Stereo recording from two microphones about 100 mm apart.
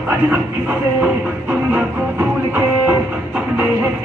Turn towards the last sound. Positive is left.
turn(degrees=-15)  # may be behind; listen again after turning